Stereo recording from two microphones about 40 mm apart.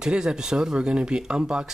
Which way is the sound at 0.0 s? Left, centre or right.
Right.